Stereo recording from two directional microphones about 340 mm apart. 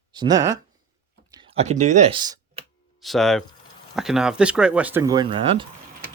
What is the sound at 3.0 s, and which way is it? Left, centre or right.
Speech, centre.